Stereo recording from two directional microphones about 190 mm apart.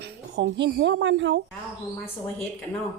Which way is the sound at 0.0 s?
65° right (ahead or behind).